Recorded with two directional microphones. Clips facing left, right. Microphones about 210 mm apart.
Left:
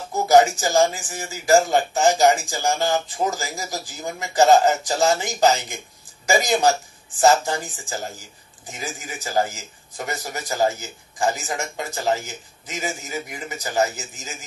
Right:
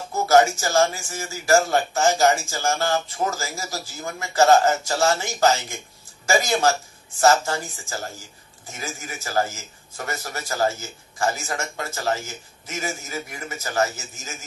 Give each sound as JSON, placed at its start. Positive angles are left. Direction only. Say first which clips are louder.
{"t": 0.1, "sound": "a man's voice", "louder": "left 2 dB", "side_deg": 15}